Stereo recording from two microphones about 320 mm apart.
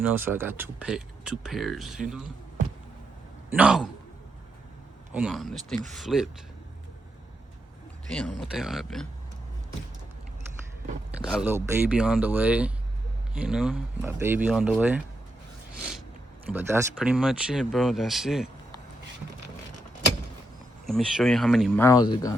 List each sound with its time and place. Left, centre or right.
0.0 s speech: centre
3.5 s speech: centre
5.1 s speech: centre
8.1 s speech: centre
11.3 s speech: centre
16.5 s speech: centre
20.8 s speech: centre